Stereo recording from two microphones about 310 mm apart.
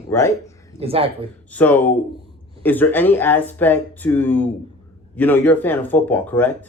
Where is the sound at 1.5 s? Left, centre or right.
Centre.